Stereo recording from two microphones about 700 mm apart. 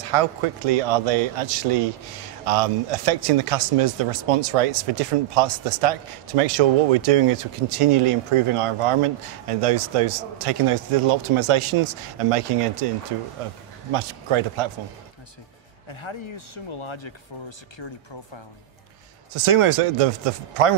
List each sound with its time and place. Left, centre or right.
0.0 s speech: right
13.9 s speech: right
15.9 s speech: left
19.3 s speech: right